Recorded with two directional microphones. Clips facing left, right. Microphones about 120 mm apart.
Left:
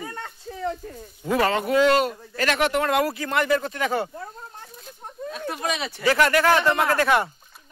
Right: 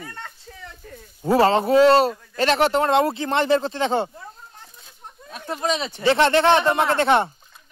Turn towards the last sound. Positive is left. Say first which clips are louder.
# right 2 dB
turn(degrees=-25)  # may be behind; listen again after turning